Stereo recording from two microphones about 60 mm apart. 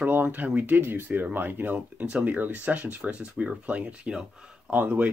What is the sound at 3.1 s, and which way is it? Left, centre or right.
Speech, centre.